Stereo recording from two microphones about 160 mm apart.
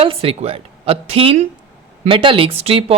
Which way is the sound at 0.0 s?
35° right (ahead or behind).